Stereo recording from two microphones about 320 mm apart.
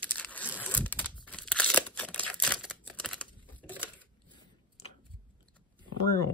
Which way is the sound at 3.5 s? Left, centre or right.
Centre.